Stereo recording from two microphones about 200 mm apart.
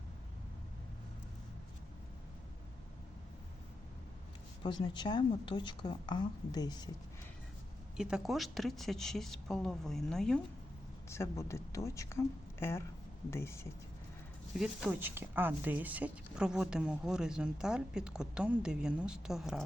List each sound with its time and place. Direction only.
4.6 s speech: 20° left (ahead or behind)
7.9 s speech: 5° right (ahead or behind)
11.1 s speech: 15° left (ahead or behind)
14.5 s speech: 5° right (ahead or behind)